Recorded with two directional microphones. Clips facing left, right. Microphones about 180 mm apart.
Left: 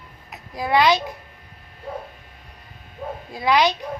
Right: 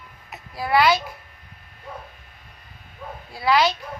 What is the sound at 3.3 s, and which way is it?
Speech, 20° left (ahead or behind).